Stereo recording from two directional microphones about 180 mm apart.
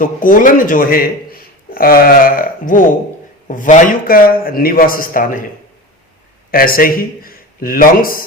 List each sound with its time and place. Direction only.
0.0 s a man's voice: 50° left (ahead or behind)
6.5 s a man's voice: 55° left (ahead or behind)